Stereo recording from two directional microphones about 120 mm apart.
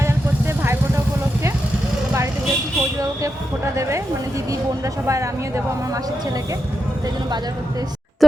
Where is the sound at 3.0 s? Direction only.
25° right (ahead or behind).